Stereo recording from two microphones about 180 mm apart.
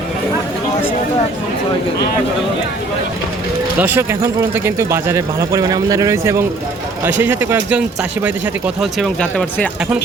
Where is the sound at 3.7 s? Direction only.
10° right (ahead or behind); by 9.6 s 5° left (ahead or behind).